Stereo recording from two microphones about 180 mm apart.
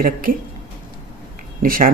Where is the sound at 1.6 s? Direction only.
50° right (ahead or behind).